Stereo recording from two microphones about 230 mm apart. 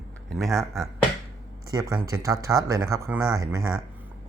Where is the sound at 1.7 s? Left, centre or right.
Centre.